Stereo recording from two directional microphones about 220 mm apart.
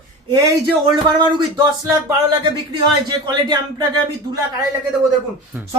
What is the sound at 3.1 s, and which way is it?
Speech, 20° right (ahead or behind).